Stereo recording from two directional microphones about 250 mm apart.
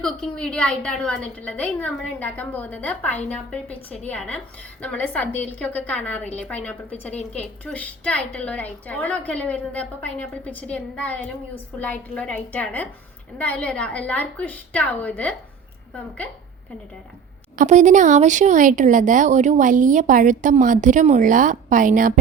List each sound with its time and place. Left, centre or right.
0.0 s a woman's voice: centre
17.6 s speech: right